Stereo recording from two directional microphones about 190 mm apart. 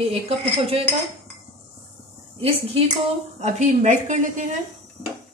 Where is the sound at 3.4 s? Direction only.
40° right (ahead or behind).